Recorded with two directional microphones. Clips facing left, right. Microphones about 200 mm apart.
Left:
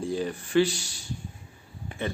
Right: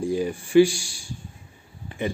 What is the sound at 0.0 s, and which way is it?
A man's voice, 10° right (ahead or behind).